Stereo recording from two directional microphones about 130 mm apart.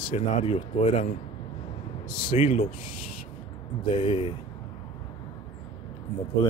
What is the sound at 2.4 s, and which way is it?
Speech, 60° left (ahead or behind).